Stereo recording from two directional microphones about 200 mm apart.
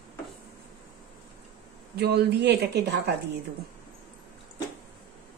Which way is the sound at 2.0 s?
55° right (ahead or behind).